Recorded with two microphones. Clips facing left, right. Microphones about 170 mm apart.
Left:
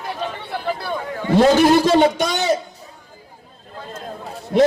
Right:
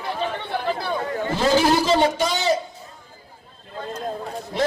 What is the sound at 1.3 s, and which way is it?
A man's voice, 60° left (ahead or behind).